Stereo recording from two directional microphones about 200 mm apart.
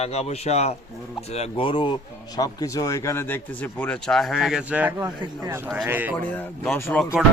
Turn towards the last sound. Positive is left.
turn(degrees=5)  # may be behind; listen again after turning